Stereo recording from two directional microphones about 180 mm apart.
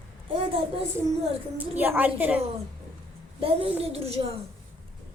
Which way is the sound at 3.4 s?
30° right (ahead or behind).